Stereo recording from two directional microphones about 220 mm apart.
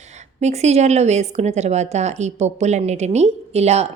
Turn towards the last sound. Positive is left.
turn(degrees=-30)  # may be behind; listen again after turning